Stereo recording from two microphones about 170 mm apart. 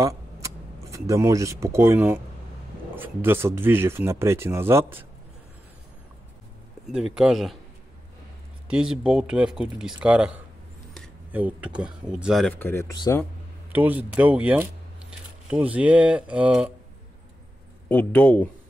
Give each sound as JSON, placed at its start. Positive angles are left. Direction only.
{"t": 0.0, "sound": "speech", "side_deg": -20}
{"t": 7.2, "sound": "speech", "side_deg": 0}
{"t": 8.6, "sound": "speech", "side_deg": -5}
{"t": 12.5, "sound": "speech", "side_deg": 15}
{"t": 13.7, "sound": "speech", "side_deg": -10}
{"t": 17.8, "sound": "speech", "side_deg": 10}